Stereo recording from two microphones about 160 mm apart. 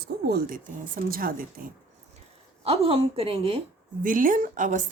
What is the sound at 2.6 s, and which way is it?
A woman's voice, 40° right (ahead or behind).